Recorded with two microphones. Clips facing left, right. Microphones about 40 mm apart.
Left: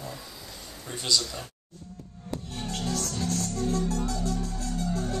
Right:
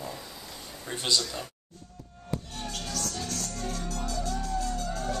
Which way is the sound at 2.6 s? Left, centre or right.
Left.